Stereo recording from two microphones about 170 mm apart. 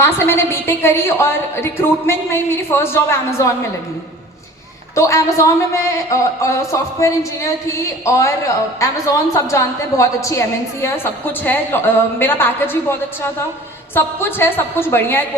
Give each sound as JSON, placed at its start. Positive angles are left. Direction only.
{"t": 0.0, "sound": "a woman's voice", "side_deg": 15}
{"t": 4.9, "sound": "a woman's voice", "side_deg": 15}